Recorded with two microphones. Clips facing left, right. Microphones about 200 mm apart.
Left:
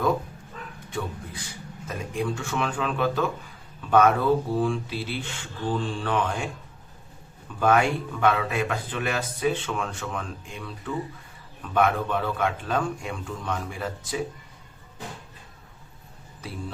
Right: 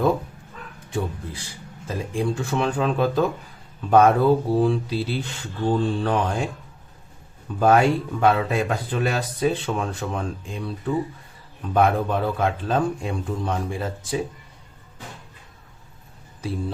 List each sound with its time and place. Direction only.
0.9 s speech: 30° right (ahead or behind)
7.6 s speech: 35° right (ahead or behind)